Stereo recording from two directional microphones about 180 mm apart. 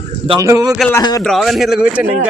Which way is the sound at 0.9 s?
20° left (ahead or behind).